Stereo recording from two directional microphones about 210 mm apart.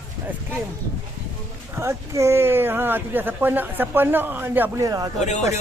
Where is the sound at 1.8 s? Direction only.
15° right (ahead or behind).